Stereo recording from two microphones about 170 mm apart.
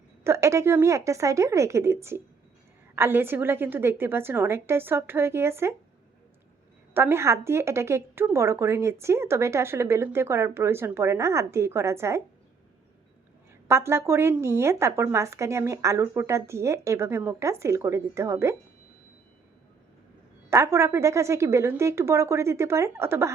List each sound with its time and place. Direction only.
0.3 s a woman's voice: 15° right (ahead or behind)
6.9 s a woman's voice: 15° right (ahead or behind)
13.7 s a woman's voice: 15° right (ahead or behind)
20.5 s a woman's voice: 15° right (ahead or behind)